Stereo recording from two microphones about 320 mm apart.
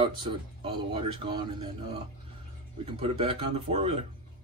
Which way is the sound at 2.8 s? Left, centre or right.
Centre.